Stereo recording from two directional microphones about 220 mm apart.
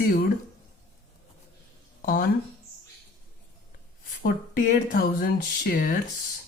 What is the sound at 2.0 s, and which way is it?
Speech, 40° left (ahead or behind).